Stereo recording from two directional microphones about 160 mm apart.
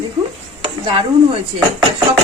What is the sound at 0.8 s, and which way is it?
Speech, 35° right (ahead or behind).